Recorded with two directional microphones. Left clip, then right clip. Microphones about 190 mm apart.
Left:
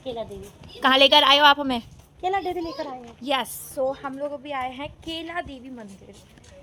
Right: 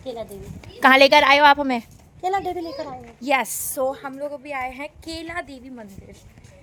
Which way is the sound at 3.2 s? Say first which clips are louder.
Right 4 dB; 35° right (ahead or behind).